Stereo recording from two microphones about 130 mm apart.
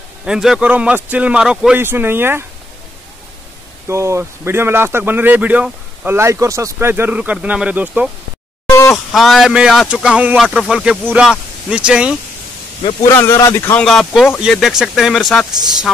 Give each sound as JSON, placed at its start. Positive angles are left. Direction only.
{"t": 0.2, "sound": "speech", "side_deg": -5}
{"t": 3.8, "sound": "speech", "side_deg": -20}
{"t": 8.6, "sound": "a sound", "side_deg": 25}
{"t": 8.9, "sound": "speech", "side_deg": 0}
{"t": 13.1, "sound": "speech", "side_deg": 20}
{"t": 13.7, "sound": "speech", "side_deg": 5}